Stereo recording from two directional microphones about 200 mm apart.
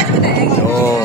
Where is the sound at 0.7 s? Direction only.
15° left (ahead or behind).